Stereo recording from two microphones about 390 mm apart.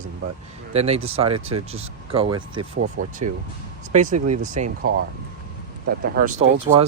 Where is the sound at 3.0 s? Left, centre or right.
Right.